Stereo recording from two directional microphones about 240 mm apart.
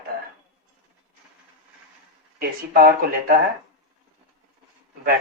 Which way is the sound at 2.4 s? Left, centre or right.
Right.